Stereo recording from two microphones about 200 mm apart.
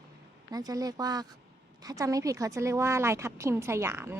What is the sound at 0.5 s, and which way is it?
A woman's voice, 20° right (ahead or behind).